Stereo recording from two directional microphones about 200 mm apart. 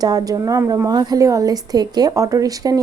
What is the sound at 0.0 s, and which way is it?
Speech, 20° right (ahead or behind).